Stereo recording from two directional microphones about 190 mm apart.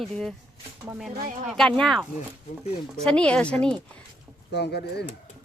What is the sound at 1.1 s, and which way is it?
Speech, 50° right (ahead or behind).